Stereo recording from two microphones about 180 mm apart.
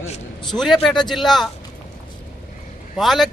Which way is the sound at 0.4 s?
Centre (ahead or behind).